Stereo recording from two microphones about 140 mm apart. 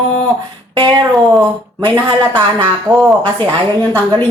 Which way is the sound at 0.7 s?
30° right (ahead or behind).